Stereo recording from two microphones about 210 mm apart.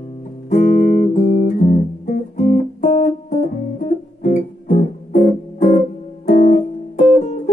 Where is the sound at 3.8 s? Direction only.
45° left (ahead or behind).